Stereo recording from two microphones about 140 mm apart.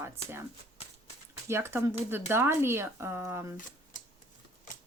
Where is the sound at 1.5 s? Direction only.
20° right (ahead or behind).